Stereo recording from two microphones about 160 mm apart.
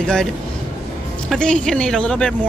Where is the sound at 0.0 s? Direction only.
5° left (ahead or behind).